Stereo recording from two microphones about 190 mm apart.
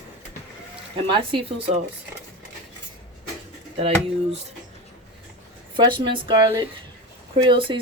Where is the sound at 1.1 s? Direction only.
25° right (ahead or behind).